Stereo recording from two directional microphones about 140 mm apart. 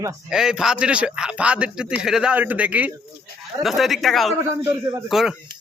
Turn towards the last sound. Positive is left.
turn(degrees=0)  # may be behind; listen again after turning